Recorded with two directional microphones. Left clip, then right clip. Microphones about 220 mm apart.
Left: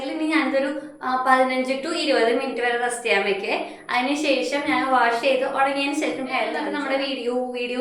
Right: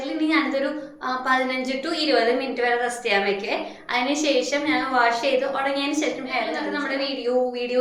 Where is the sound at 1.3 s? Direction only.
Centre (ahead or behind).